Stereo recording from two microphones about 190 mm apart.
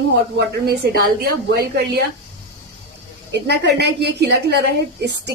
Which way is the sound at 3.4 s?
60° right (ahead or behind).